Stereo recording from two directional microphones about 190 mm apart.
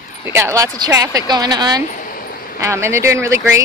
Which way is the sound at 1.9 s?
45° left (ahead or behind).